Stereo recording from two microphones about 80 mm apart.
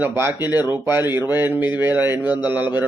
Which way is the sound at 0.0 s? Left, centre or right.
Right.